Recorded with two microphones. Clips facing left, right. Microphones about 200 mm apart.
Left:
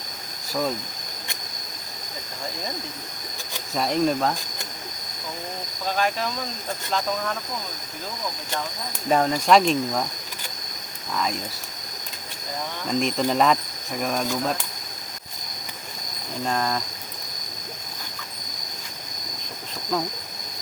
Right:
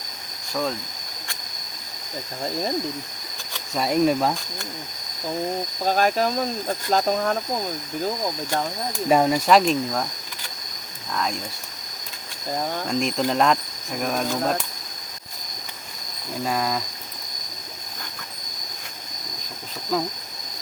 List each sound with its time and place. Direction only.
3.8 s speech: 5° right (ahead or behind)
5.8 s speech: 40° right (ahead or behind)
9.0 s speech: 10° right (ahead or behind)
11.1 s speech: centre (ahead or behind)
12.9 s speech: centre (ahead or behind)
16.4 s speech: 5° right (ahead or behind)
19.9 s speech: 5° right (ahead or behind)